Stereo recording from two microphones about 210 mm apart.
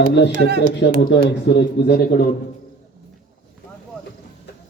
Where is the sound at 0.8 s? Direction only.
55° left (ahead or behind).